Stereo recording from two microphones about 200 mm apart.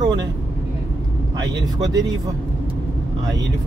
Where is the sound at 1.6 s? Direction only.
20° right (ahead or behind).